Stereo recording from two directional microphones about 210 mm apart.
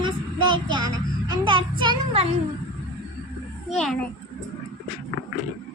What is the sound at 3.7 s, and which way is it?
Speech, centre (ahead or behind).